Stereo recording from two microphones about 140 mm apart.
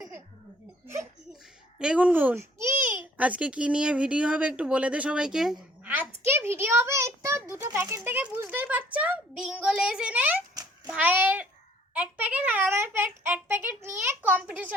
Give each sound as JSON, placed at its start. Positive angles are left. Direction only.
{"t": 1.8, "sound": "a child's voice", "side_deg": -10}
{"t": 5.8, "sound": "a sound", "side_deg": -10}
{"t": 6.2, "sound": "a child's voice", "side_deg": -15}